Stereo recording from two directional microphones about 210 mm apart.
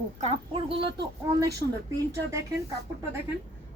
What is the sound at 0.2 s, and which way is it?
Speech, 30° right (ahead or behind).